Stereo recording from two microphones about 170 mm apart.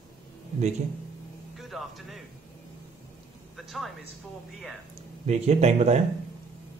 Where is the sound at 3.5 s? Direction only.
Centre (ahead or behind).